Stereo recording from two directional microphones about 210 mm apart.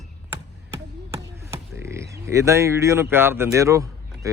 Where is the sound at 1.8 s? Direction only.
15° right (ahead or behind).